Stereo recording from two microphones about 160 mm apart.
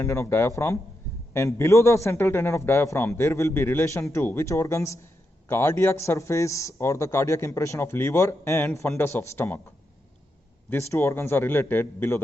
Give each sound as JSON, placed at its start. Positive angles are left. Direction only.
{"t": 0.0, "sound": "a man's voice", "side_deg": 15}
{"t": 10.7, "sound": "a man's voice", "side_deg": 15}